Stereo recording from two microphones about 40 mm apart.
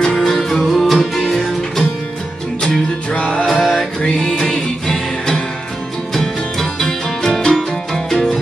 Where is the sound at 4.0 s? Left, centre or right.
Centre.